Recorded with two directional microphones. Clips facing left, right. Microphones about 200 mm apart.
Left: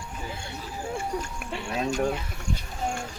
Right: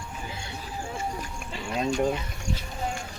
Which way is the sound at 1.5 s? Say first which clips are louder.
Left 2 dB; 60° left (ahead or behind).